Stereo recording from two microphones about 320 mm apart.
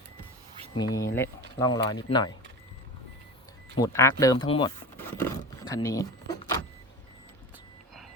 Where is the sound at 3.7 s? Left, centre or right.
Centre.